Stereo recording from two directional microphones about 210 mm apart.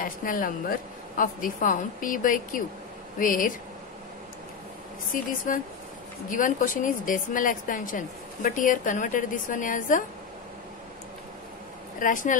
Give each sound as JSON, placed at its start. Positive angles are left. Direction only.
{"t": 0.0, "sound": "a woman's voice", "side_deg": 40}
{"t": 5.1, "sound": "a woman's voice", "side_deg": 40}
{"t": 6.3, "sound": "a woman's voice", "side_deg": 40}
{"t": 12.0, "sound": "a woman's voice", "side_deg": 40}